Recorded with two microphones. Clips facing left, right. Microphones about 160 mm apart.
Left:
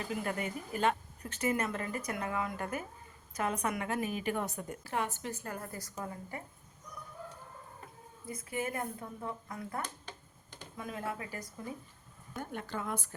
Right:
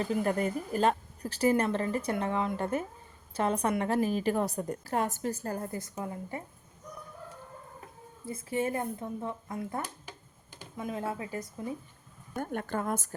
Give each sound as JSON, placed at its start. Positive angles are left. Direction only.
{"t": 0.0, "sound": "a woman's voice", "side_deg": -40}
{"t": 8.3, "sound": "speech", "side_deg": -25}
{"t": 9.8, "sound": "finger snapping", "side_deg": -10}
{"t": 10.8, "sound": "speech", "side_deg": -25}
{"t": 12.4, "sound": "a woman's voice", "side_deg": -50}